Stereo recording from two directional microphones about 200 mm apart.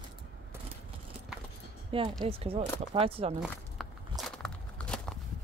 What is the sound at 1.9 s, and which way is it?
Speech, 25° right (ahead or behind).